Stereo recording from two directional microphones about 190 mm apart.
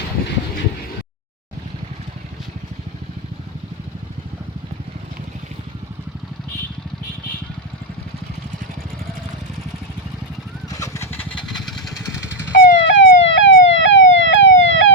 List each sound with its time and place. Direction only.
10.7 s vehicle: 15° left (ahead or behind)
12.5 s emergency vehicle: 70° left (ahead or behind)